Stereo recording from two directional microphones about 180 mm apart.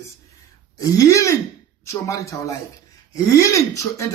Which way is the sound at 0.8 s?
20° left (ahead or behind).